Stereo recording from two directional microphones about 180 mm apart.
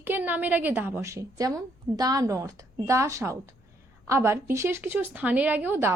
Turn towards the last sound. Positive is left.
turn(degrees=-10)  # may be behind; listen again after turning